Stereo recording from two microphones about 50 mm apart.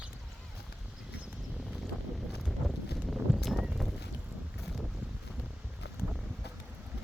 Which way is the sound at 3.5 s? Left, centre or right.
Centre.